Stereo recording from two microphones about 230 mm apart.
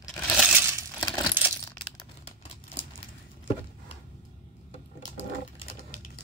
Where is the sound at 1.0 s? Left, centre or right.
Centre.